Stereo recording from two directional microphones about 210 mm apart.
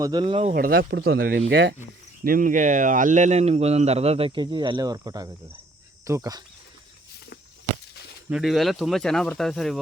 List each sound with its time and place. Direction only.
0.0 s speech: 20° right (ahead or behind)
0.5 s speech: 45° right (ahead or behind)
2.2 s speech: 40° right (ahead or behind); by 6.4 s 15° right (ahead or behind)
8.3 s speech: centre (ahead or behind)